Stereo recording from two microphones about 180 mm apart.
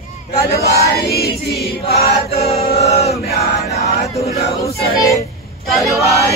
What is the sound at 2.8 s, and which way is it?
Chant, 35° left (ahead or behind).